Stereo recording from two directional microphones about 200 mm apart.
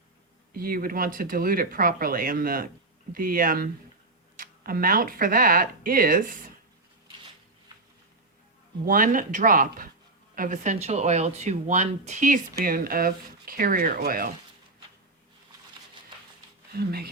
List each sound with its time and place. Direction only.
0.5 s speech: 45° right (ahead or behind)
8.8 s speech: 45° right (ahead or behind)
16.7 s speech: 50° right (ahead or behind)